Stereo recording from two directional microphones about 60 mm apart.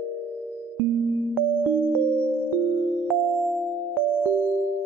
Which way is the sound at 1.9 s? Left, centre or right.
Right.